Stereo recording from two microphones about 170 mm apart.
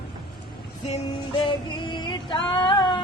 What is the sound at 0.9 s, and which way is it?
Female singing, 35° left (ahead or behind).